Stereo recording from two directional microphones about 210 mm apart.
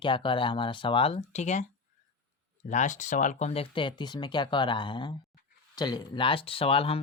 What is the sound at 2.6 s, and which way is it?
Speech, 35° left (ahead or behind).